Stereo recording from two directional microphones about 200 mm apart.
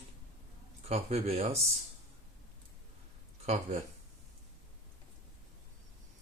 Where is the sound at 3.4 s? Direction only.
30° right (ahead or behind).